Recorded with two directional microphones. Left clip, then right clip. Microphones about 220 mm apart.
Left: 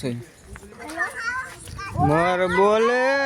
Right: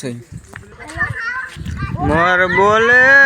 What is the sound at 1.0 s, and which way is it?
Children playing, 30° left (ahead or behind).